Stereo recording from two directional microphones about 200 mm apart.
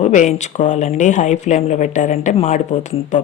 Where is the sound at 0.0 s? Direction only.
35° left (ahead or behind).